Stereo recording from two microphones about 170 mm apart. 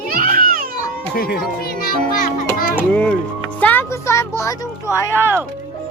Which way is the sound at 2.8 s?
10° left (ahead or behind).